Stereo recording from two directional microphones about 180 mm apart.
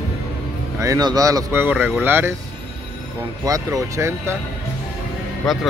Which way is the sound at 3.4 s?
20° right (ahead or behind).